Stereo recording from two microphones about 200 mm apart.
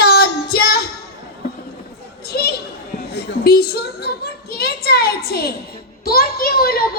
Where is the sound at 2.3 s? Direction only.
50° left (ahead or behind).